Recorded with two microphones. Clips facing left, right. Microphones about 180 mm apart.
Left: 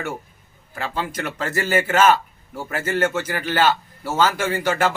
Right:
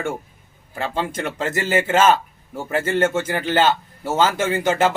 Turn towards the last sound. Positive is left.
turn(degrees=-20)  # may be behind; listen again after turning